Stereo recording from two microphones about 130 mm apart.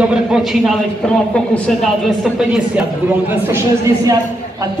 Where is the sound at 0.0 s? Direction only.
5° right (ahead or behind).